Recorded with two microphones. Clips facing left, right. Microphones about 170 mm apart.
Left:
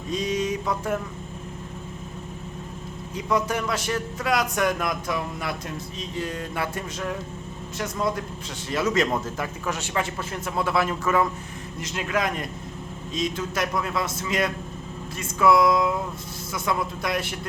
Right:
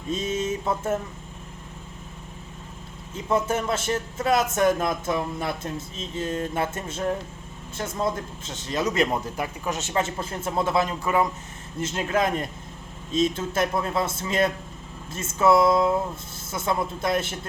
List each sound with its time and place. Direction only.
0.1 s mantra: 25° right (ahead or behind)
3.2 s a man's voice: 25° right (ahead or behind)
11.8 s a man's voice: 30° right (ahead or behind)